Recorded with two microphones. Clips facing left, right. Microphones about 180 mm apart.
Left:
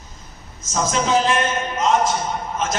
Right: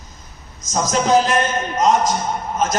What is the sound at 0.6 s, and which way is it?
A man's voice, 40° right (ahead or behind).